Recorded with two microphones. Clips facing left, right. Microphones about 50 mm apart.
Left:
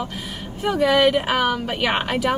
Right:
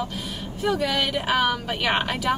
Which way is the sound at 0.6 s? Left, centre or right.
Left.